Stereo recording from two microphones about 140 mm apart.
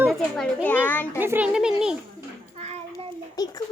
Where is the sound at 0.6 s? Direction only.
15° left (ahead or behind).